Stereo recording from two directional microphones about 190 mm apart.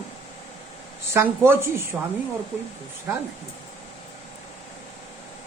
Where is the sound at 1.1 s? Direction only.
10° right (ahead or behind).